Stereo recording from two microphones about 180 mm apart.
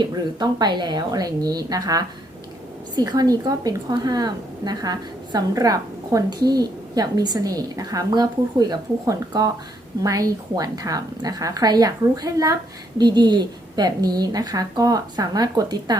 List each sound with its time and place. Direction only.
0.0 s a woman's voice: 25° right (ahead or behind)